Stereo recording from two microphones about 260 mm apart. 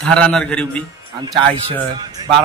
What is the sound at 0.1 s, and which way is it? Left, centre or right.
A man's voice, centre.